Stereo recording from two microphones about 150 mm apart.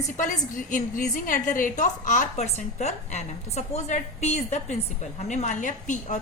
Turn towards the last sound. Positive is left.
turn(degrees=55)  # may be behind; listen again after turning